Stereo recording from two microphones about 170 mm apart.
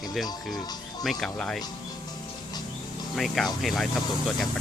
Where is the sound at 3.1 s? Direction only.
Centre (ahead or behind).